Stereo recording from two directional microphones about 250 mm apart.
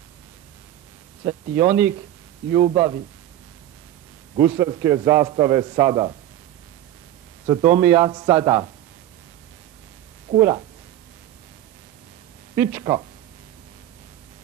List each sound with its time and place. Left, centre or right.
1.2 s a man's voice: centre
4.6 s a man's voice: centre
7.4 s a man's voice: centre
10.3 s a man's voice: centre
12.5 s a man's voice: centre